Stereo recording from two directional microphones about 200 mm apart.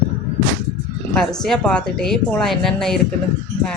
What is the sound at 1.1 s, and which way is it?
Speech, centre (ahead or behind).